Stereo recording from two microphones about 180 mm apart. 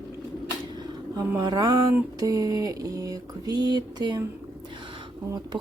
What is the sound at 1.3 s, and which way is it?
Speech, 20° right (ahead or behind).